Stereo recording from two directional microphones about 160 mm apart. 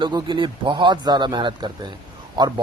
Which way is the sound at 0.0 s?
30° right (ahead or behind).